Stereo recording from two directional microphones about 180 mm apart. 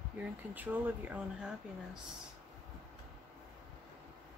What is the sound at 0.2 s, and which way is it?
Speech, 10° right (ahead or behind).